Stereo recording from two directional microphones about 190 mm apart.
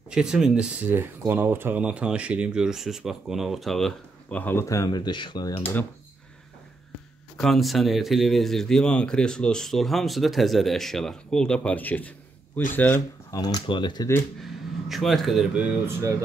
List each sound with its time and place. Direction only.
0.1 s speech: 5° right (ahead or behind); by 5.7 s 25° left (ahead or behind)
7.3 s speech: centre (ahead or behind); by 14.2 s 20° left (ahead or behind)
14.4 s speech: centre (ahead or behind)